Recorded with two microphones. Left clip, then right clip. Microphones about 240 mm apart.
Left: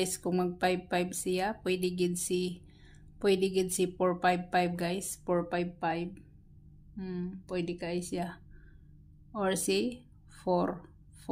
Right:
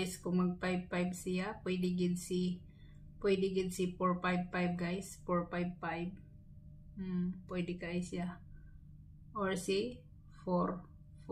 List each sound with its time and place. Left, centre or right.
0.0 s a woman's voice: left